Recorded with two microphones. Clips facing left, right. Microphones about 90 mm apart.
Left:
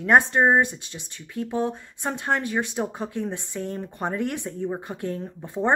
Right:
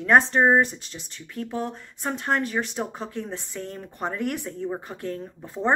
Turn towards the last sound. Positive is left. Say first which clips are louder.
# left 1 dB
turn(degrees=20)  # may be behind; listen again after turning